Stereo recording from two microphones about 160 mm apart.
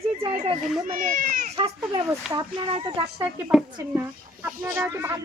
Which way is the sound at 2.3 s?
30° right (ahead or behind).